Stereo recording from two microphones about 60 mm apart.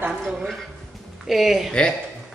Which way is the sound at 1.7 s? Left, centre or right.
Centre.